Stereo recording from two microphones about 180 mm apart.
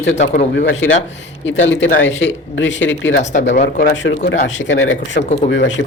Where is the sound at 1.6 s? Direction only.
90° left.